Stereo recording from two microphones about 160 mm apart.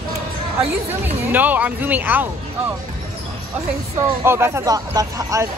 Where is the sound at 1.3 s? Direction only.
10° right (ahead or behind).